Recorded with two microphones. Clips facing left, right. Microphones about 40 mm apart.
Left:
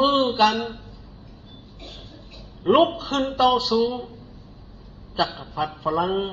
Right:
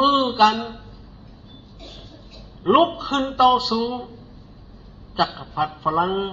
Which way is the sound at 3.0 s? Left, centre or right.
Right.